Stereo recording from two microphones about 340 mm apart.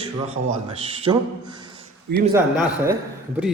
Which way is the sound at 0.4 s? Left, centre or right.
Right.